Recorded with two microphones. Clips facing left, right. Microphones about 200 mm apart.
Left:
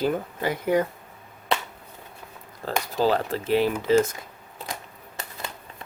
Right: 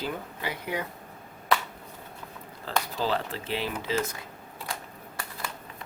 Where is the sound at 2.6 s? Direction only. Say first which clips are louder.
Left 6 dB; 45° left (ahead or behind).